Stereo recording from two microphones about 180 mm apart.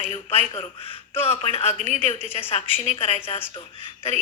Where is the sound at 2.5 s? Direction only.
35° left (ahead or behind).